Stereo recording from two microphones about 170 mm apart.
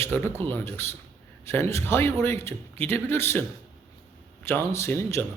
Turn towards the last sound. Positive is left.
turn(degrees=15)  # may be behind; listen again after turning